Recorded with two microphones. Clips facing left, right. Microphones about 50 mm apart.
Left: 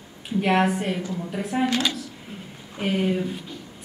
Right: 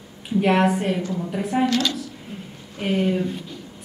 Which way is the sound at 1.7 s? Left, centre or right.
Centre.